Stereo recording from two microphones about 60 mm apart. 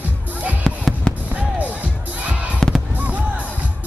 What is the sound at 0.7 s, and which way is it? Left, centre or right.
Drum, centre.